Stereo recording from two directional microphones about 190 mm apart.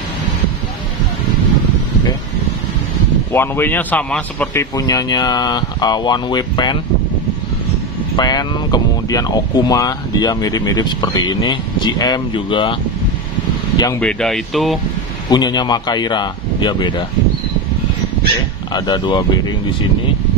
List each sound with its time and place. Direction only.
3.3 s a man's voice: 10° left (ahead or behind)
4.7 s speech: 20° left (ahead or behind)
8.2 s speech: 20° left (ahead or behind)
13.7 s speech: 15° left (ahead or behind)
14.0 s speech: centre (ahead or behind)
15.2 s speech: 20° left (ahead or behind)
18.7 s speech: 20° left (ahead or behind)